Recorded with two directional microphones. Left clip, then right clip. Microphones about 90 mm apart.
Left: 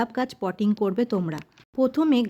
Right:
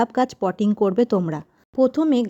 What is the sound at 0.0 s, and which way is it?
Speech, 60° right (ahead or behind).